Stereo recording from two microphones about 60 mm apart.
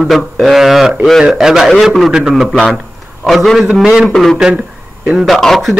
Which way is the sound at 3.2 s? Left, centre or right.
Centre.